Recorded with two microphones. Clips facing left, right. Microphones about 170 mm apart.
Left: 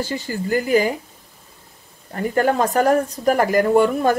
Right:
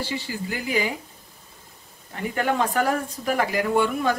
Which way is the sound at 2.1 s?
40° left (ahead or behind).